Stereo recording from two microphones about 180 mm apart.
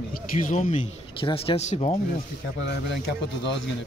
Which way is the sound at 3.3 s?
75° left (ahead or behind).